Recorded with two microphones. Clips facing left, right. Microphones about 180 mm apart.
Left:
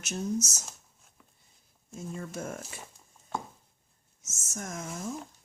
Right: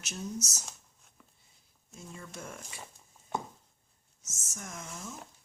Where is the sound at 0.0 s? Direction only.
45° left (ahead or behind).